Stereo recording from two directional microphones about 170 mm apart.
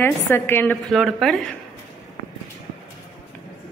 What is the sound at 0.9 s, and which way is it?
Speech, centre (ahead or behind).